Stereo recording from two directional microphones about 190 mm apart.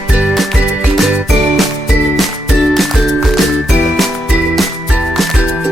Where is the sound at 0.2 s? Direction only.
Centre (ahead or behind).